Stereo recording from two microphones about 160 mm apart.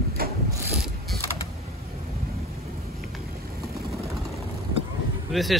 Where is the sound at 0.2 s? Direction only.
70° right (ahead or behind).